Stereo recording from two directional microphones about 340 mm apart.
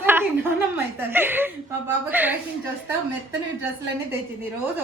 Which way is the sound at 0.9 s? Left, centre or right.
Centre.